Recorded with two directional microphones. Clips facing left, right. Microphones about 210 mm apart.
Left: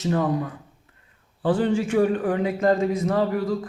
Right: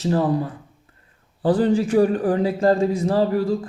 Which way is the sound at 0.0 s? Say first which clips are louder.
Right 3 dB; 30° right (ahead or behind).